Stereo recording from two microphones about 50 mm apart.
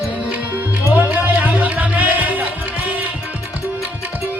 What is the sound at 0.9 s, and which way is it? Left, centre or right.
Music, right.